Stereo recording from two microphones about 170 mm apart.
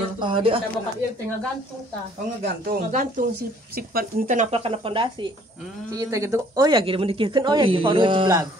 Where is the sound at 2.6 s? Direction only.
50° right (ahead or behind).